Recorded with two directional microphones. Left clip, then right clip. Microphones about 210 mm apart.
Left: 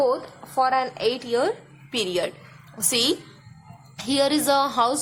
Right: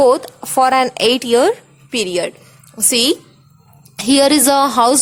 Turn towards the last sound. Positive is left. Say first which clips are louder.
# right 8 dB
turn(degrees=-45)  # may be behind; listen again after turning